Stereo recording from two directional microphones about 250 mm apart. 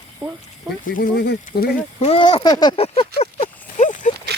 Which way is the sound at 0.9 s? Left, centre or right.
Left.